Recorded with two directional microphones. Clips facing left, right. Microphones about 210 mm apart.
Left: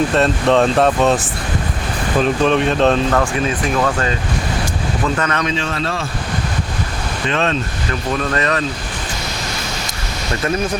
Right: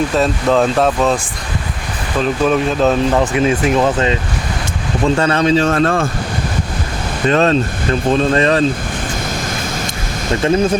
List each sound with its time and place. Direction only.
0.1 s speech: centre (ahead or behind)
2.2 s speech: 5° right (ahead or behind)
3.0 s speech: 15° right (ahead or behind); by 6.1 s 50° right (ahead or behind)
7.3 s speech: 40° right (ahead or behind)
8.1 s speech: 25° right (ahead or behind)